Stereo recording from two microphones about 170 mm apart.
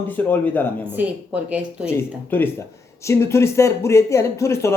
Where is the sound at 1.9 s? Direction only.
10° left (ahead or behind).